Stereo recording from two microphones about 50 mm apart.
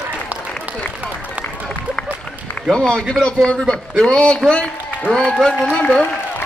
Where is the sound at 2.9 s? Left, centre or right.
Left.